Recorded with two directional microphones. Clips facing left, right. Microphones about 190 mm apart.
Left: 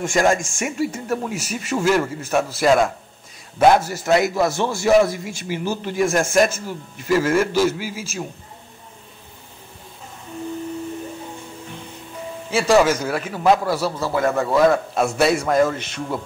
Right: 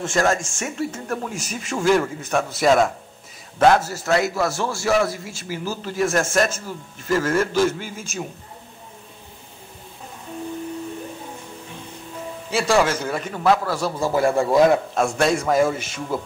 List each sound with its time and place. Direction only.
0.0 s speech: 15° left (ahead or behind)
3.5 s a man's voice: 15° left (ahead or behind)
12.4 s a man's voice: centre (ahead or behind)
14.1 s speech: 30° right (ahead or behind)
14.4 s a man's voice: 15° right (ahead or behind)
15.0 s speech: 5° left (ahead or behind)